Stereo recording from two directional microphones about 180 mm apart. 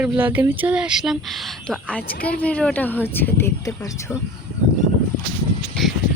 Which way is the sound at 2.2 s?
5° left (ahead or behind).